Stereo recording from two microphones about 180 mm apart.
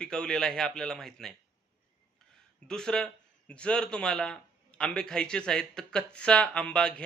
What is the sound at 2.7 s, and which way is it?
Speech, 5° left (ahead or behind).